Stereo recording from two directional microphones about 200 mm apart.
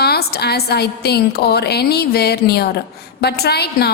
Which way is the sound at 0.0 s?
50° left (ahead or behind).